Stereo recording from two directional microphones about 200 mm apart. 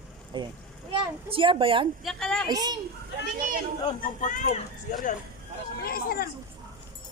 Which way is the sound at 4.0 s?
40° left (ahead or behind).